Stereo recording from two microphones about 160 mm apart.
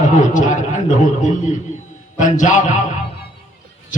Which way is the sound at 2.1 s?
50° left (ahead or behind).